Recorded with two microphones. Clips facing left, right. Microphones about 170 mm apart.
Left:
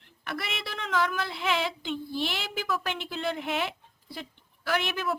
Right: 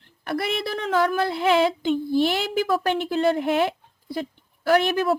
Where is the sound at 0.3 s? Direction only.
40° right (ahead or behind).